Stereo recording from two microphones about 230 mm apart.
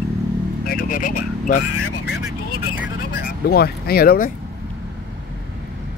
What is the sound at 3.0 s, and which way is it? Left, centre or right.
Vehicle, left.